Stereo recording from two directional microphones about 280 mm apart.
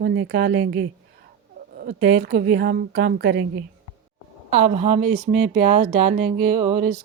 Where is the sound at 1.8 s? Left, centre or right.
Right.